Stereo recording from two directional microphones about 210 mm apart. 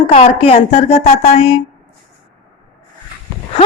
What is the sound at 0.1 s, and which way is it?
Speech, 30° left (ahead or behind).